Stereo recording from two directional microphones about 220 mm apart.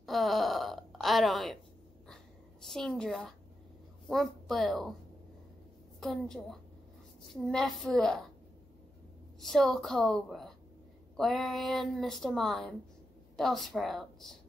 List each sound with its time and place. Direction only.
0.0 s burping: centre (ahead or behind)
2.6 s a woman's voice: centre (ahead or behind)
5.9 s speech: centre (ahead or behind)
9.4 s speech: centre (ahead or behind)